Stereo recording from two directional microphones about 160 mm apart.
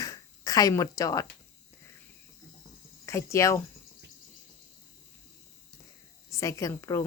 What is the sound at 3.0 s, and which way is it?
Speech, 20° left (ahead or behind).